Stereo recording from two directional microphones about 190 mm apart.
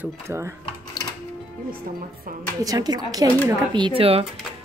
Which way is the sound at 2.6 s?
20° right (ahead or behind).